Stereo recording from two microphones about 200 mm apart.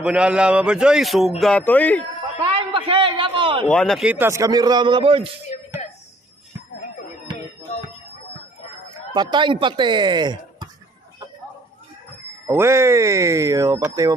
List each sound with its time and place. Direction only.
0.0 s a man's voice: 5° right (ahead or behind)
2.5 s a sound: 25° right (ahead or behind)
3.6 s a man's voice: 5° left (ahead or behind); by 5.3 s 25° right (ahead or behind)
9.1 s speech: 20° right (ahead or behind)
12.4 s a man's voice: 15° right (ahead or behind)